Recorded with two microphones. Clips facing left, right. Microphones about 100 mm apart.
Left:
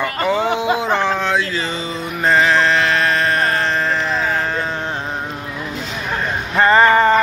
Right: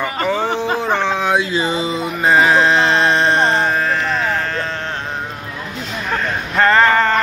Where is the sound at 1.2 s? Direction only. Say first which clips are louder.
Right 3 dB; 15° right (ahead or behind).